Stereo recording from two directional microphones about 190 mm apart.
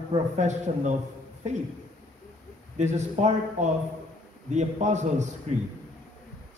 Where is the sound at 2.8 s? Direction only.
40° right (ahead or behind).